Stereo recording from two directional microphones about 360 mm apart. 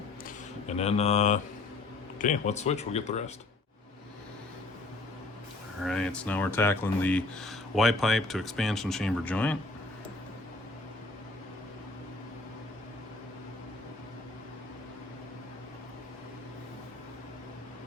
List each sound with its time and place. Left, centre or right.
0.7 s mantra: centre
2.1 s speech: centre
5.8 s speech: centre